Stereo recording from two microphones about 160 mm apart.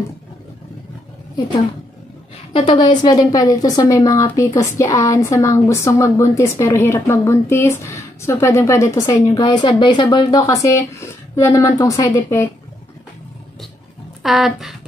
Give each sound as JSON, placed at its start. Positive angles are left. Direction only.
{"t": 2.5, "sound": "a woman's voice", "side_deg": 30}
{"t": 14.2, "sound": "speech", "side_deg": 0}